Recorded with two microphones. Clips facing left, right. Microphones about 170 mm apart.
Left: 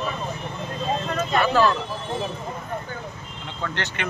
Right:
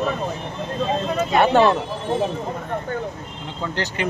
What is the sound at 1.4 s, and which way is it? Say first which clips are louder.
Speech: right 4 dB; 25° right (ahead or behind).